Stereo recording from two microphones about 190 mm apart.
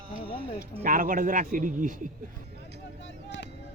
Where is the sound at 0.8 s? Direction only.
45° right (ahead or behind).